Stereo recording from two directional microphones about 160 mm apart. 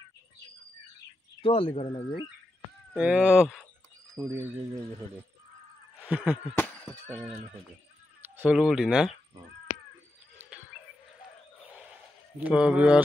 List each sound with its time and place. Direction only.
1.4 s speech: 35° left (ahead or behind)
2.9 s speech: 10° right (ahead or behind)
4.2 s speech: 15° right (ahead or behind)
6.0 s a sound: 10° right (ahead or behind)
6.5 s a sound: 10° left (ahead or behind)
8.4 s speech: 5° right (ahead or behind)
10.3 s bird: 10° right (ahead or behind)
11.7 s a sound: 5° right (ahead or behind)
12.4 s speech: 10° right (ahead or behind)